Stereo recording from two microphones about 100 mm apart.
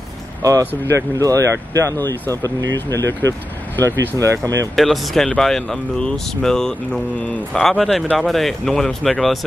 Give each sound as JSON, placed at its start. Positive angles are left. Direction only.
{"t": 0.4, "sound": "speech", "side_deg": -35}
{"t": 3.8, "sound": "speech", "side_deg": -35}
{"t": 4.7, "sound": "speech", "side_deg": 0}